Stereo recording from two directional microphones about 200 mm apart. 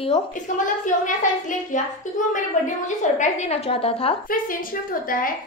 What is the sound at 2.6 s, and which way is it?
A woman's voice, 35° left (ahead or behind).